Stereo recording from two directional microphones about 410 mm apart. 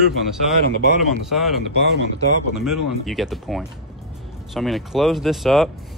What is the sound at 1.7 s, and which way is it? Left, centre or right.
Speech, right.